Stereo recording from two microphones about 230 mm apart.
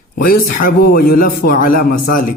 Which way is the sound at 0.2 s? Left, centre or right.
Left.